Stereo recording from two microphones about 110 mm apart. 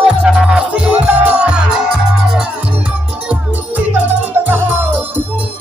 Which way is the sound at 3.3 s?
15° right (ahead or behind).